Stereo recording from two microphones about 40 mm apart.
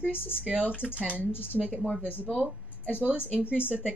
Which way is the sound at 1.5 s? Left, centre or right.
Centre.